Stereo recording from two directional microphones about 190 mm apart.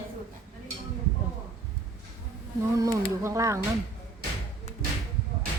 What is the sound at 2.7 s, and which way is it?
Speech, 15° right (ahead or behind).